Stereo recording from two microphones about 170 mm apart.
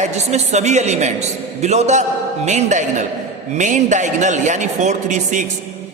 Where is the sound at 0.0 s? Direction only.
40° right (ahead or behind).